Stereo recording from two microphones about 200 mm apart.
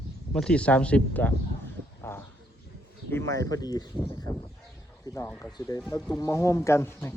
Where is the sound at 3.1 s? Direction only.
15° left (ahead or behind).